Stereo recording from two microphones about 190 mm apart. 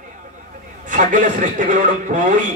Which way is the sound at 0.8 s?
40° right (ahead or behind).